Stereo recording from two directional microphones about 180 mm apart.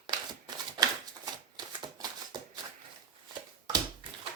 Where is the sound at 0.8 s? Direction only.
20° right (ahead or behind).